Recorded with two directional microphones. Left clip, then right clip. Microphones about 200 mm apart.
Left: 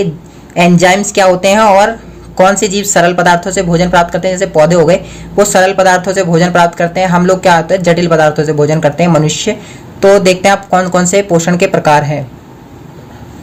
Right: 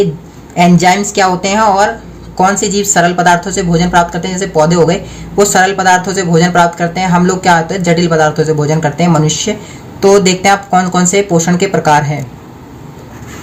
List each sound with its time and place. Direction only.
0.9 s a woman's voice: 30° left (ahead or behind)